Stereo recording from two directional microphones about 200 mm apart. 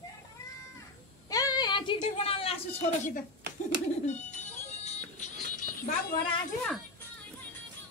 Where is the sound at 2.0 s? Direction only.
30° left (ahead or behind).